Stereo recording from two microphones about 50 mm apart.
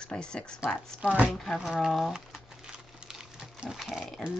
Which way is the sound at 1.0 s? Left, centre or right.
Right.